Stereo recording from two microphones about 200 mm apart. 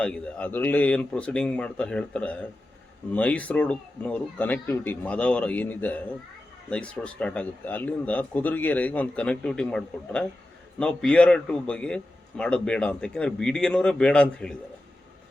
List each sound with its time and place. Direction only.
0.0 s a man's voice: 5° left (ahead or behind)